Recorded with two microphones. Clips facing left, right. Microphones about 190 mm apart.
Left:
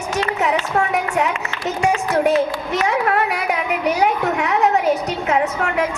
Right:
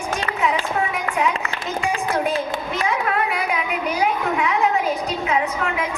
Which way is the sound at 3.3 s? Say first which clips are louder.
Left 2 dB; 75° left (ahead or behind).